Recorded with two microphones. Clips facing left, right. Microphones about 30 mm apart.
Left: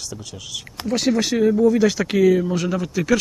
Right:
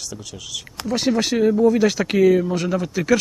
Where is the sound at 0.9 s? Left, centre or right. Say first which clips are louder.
Even; right.